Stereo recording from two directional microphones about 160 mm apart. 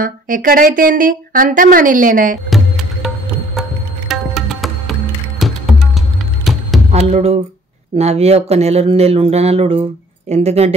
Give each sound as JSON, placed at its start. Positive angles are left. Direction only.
{"t": 0.0, "sound": "speech", "side_deg": -60}
{"t": 2.5, "sound": "music", "side_deg": 0}
{"t": 4.1, "sound": "music", "side_deg": 0}
{"t": 6.5, "sound": "a sound", "side_deg": 0}
{"t": 6.9, "sound": "speech", "side_deg": -40}